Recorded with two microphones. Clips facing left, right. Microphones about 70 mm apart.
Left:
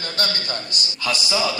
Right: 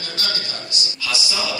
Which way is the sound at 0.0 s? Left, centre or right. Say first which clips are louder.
Left 2 dB; left.